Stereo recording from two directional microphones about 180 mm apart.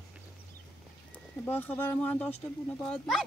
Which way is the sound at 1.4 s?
10° left (ahead or behind).